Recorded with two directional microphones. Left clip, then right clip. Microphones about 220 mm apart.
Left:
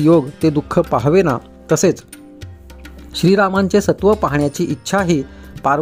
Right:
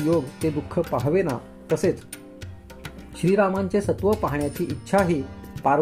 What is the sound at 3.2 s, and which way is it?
Speech, 50° left (ahead or behind).